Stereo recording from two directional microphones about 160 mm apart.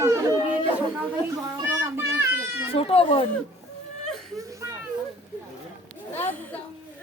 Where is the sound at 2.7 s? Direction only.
35° left (ahead or behind).